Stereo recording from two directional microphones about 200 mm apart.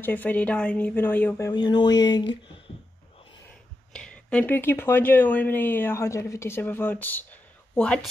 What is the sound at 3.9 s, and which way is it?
Speech, 5° left (ahead or behind).